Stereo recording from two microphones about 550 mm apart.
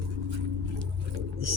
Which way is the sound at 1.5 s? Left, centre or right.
Right.